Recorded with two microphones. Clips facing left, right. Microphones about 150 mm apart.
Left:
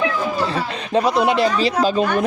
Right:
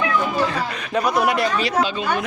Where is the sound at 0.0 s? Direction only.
30° left (ahead or behind).